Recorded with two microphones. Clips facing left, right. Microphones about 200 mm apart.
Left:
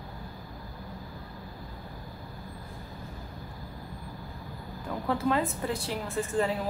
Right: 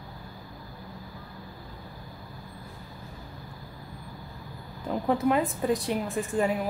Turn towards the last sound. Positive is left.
turn(degrees=-15)  # may be behind; listen again after turning